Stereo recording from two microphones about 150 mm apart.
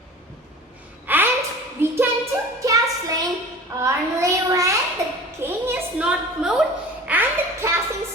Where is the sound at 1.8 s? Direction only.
15° right (ahead or behind).